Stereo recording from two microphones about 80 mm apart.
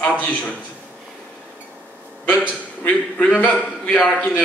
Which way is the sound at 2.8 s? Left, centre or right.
Centre.